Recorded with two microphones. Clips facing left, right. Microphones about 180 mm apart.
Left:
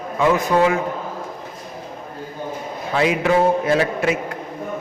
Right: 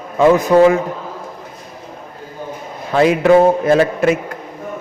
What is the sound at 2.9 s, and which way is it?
A man's voice, 45° right (ahead or behind).